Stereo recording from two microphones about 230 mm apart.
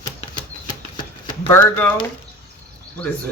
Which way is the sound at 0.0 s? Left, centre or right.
Centre.